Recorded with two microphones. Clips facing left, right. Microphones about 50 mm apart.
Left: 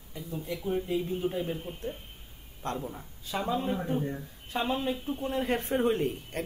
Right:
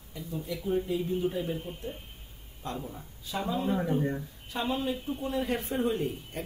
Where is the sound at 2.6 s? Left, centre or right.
Left.